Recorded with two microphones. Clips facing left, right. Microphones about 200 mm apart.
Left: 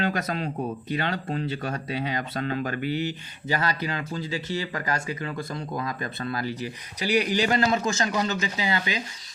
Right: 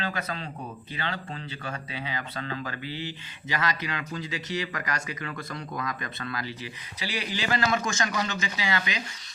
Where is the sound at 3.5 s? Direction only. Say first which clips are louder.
Left 3 dB; 35° left (ahead or behind).